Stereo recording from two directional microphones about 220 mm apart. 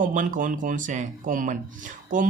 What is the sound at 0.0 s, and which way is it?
Speech, 35° right (ahead or behind).